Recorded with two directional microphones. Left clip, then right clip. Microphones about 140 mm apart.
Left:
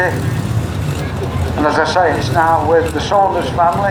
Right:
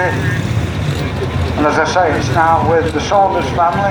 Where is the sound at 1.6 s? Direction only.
50° right (ahead or behind).